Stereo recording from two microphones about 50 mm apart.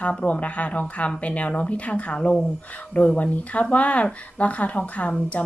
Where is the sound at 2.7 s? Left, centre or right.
Left.